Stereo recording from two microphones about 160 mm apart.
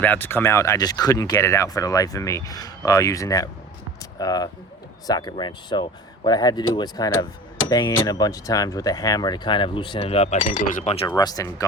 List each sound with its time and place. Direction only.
0.0 s speech: 10° left (ahead or behind); by 10.9 s 50° left (ahead or behind)
11.2 s speech: 25° left (ahead or behind)